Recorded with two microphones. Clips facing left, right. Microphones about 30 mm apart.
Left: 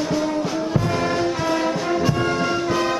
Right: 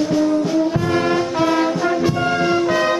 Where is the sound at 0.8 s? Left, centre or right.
Centre.